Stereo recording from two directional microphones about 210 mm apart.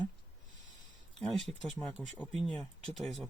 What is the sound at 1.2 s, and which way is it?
Speech, centre (ahead or behind).